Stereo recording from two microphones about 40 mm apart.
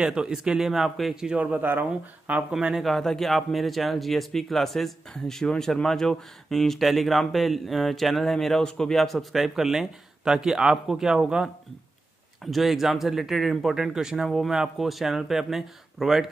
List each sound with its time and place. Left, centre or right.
0.0 s speech: centre
1.3 s speech: right
1.6 s speech: right
2.3 s speech: right
2.8 s a man's voice: centre
6.8 s a man's voice: centre
9.3 s speech: centre
12.4 s a man's voice: centre